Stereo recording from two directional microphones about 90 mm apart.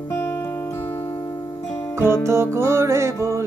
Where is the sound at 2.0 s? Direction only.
30° right (ahead or behind).